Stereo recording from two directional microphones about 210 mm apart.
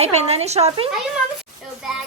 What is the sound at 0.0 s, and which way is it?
Speech, 30° right (ahead or behind).